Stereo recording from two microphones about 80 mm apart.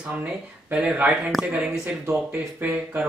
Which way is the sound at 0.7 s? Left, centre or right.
Centre.